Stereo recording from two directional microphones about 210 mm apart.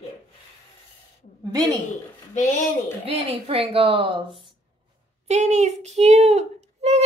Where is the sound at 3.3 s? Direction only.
25° right (ahead or behind).